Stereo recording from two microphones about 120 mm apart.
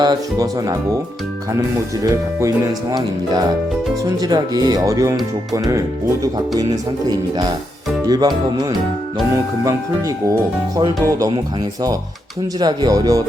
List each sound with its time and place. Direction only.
0.0 s speech: 35° right (ahead or behind)
7.1 s speech: 35° right (ahead or behind)
12.5 s speech: 35° right (ahead or behind)